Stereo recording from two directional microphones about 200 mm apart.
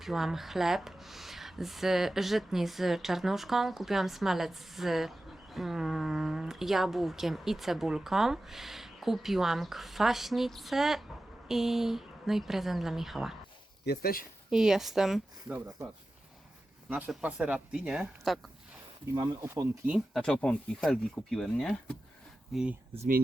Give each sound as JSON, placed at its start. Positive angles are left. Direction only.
{"t": 0.0, "sound": "speech", "side_deg": 0}
{"t": 13.8, "sound": "speech", "side_deg": 50}
{"t": 14.5, "sound": "speech", "side_deg": 0}
{"t": 16.9, "sound": "speech", "side_deg": -5}
{"t": 19.1, "sound": "speech", "side_deg": -15}